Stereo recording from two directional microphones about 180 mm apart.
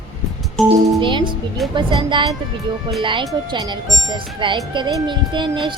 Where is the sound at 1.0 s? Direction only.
25° right (ahead or behind).